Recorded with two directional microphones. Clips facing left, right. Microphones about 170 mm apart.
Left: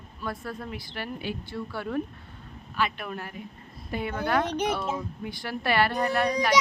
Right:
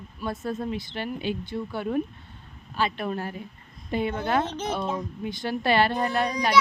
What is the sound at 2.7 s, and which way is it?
A woman's voice, 30° right (ahead or behind).